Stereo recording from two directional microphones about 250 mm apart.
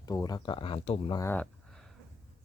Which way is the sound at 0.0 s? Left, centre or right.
Centre.